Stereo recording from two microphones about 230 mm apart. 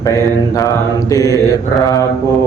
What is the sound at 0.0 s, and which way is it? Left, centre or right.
Mantra, centre.